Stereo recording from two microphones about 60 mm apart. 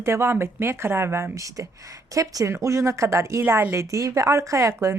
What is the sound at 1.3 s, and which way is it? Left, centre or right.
Speech, right.